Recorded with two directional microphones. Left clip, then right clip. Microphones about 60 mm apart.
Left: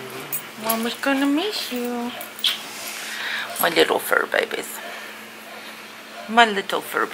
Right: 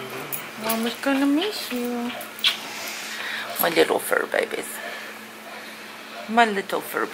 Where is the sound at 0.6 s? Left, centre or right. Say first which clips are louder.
Left 2 dB; right.